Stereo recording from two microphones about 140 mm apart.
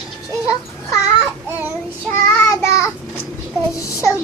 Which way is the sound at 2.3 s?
20° left (ahead or behind).